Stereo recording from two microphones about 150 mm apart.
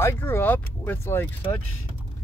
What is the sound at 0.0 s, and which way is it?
Speech, 15° left (ahead or behind).